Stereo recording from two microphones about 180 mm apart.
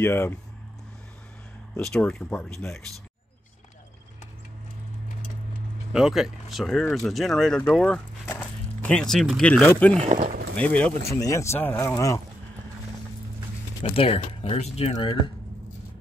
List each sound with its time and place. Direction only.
0.0 s speech: 10° left (ahead or behind)
1.8 s speech: 5° left (ahead or behind)
5.9 s speech: 5° right (ahead or behind)
10.0 s speech: 35° right (ahead or behind)
10.5 s speech: 5° left (ahead or behind)
11.1 s speech: 15° left (ahead or behind)
13.8 s speech: 30° left (ahead or behind)